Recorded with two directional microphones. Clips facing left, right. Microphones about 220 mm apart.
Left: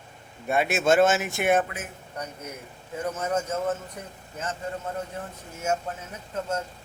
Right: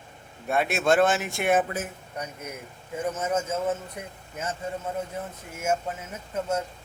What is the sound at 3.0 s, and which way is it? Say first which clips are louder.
A man's voice: even; 5° right (ahead or behind).